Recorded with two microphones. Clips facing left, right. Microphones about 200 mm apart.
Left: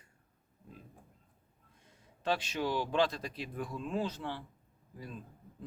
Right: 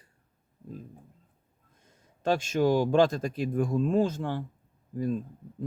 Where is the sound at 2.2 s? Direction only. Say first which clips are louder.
Right 9 dB; 45° right (ahead or behind).